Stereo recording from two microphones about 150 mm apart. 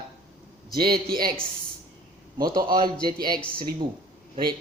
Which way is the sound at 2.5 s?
30° right (ahead or behind).